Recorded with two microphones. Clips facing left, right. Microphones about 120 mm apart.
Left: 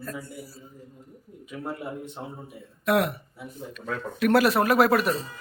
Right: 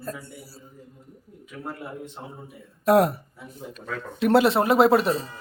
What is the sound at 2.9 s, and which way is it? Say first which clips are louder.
Speech: right 5 dB; 35° right (ahead or behind).